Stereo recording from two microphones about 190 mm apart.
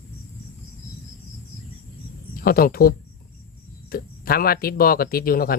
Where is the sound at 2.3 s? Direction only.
50° left (ahead or behind).